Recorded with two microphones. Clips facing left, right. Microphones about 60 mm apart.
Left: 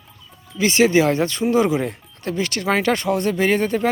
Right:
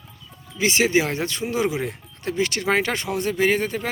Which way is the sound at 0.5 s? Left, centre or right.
Centre.